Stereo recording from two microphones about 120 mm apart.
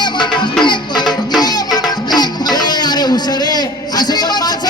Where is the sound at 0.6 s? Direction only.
40° left (ahead or behind).